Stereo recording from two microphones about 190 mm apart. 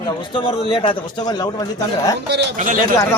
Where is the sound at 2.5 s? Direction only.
45° right (ahead or behind).